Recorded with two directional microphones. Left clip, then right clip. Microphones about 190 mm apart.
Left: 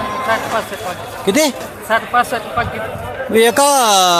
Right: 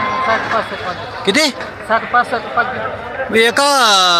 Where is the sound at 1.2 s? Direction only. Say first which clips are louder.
Even; 15° left (ahead or behind).